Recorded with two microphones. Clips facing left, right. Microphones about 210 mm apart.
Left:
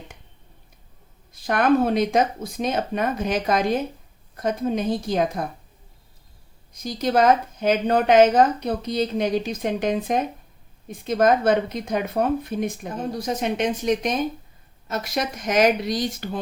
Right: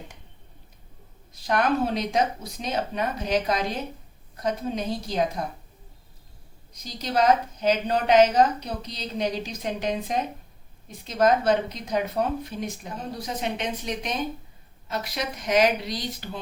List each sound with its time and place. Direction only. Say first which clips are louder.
1.3 s a woman's voice: left 5 dB; 55° left (ahead or behind)
6.8 s a woman's voice: left 4 dB; 50° left (ahead or behind)